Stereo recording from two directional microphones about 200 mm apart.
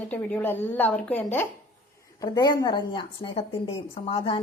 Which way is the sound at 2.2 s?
20° left (ahead or behind).